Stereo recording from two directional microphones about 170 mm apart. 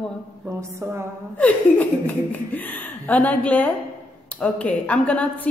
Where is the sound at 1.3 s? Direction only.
10° left (ahead or behind).